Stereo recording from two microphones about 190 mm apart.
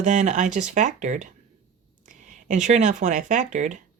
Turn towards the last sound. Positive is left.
turn(degrees=-40)  # may be behind; listen again after turning